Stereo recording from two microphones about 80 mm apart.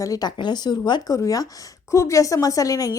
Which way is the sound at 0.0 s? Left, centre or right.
Left.